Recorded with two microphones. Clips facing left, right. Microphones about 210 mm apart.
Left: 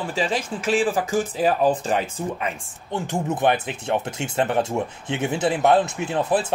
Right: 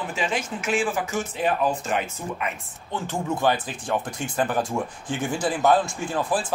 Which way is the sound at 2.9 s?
20° left (ahead or behind).